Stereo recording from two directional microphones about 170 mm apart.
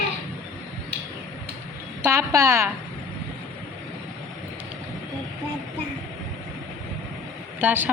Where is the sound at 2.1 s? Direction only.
15° right (ahead or behind).